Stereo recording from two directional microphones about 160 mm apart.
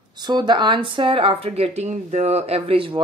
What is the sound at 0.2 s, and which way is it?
Speech, 25° right (ahead or behind).